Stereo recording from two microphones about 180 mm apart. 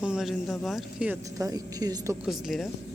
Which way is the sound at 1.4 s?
20° right (ahead or behind).